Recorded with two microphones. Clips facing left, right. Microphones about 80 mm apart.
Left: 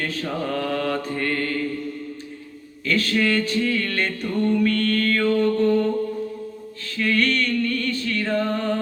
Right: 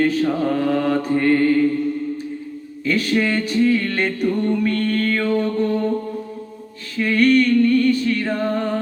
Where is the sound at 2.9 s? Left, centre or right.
Centre.